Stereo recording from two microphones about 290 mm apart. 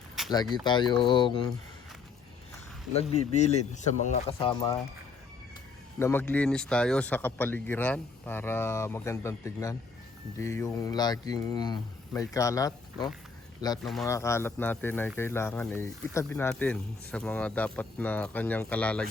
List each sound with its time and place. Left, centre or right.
0.2 s a sound: centre
0.6 s speech: centre
2.9 s speech: left
6.0 s speech: centre